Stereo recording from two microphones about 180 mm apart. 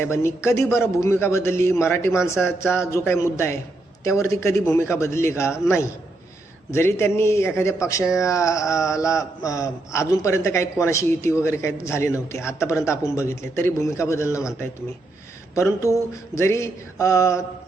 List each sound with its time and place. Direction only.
0.0 s speech: 15° left (ahead or behind)
15.5 s speech: 15° left (ahead or behind)